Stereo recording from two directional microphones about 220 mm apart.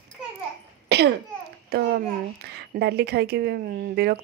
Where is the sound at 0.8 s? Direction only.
50° right (ahead or behind).